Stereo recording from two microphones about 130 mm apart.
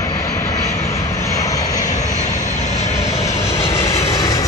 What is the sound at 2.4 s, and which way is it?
Vehicle, 70° left (ahead or behind).